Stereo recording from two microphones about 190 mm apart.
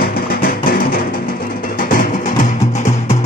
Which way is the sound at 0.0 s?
55° left (ahead or behind).